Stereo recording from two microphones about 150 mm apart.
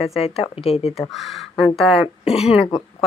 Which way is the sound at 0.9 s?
Centre (ahead or behind).